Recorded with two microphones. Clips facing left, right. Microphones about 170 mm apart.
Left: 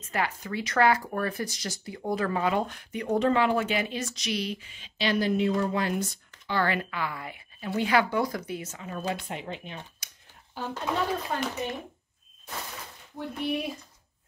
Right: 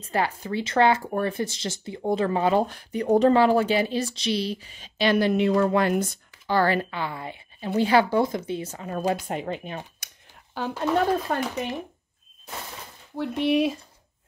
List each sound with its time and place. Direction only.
0.0 s speech: 30° right (ahead or behind); by 6.0 s 60° right (ahead or behind)
6.4 s speech: 40° right (ahead or behind)
10.6 s speech: 90° right
11.3 s speech: 55° right (ahead or behind)
13.1 s speech: 90° right